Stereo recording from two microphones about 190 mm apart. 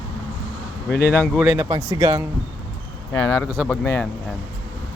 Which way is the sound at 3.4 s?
10° left (ahead or behind).